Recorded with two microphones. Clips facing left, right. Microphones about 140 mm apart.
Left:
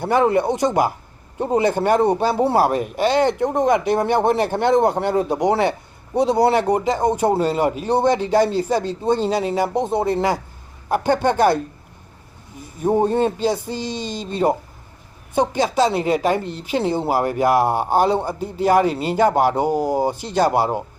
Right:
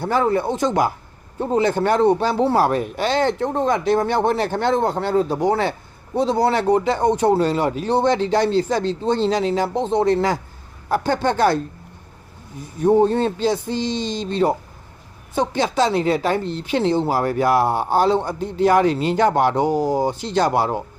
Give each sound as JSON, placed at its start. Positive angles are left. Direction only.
{"t": 0.0, "sound": "speech", "side_deg": 15}
{"t": 12.8, "sound": "speech", "side_deg": 10}
{"t": 15.7, "sound": "speech", "side_deg": 10}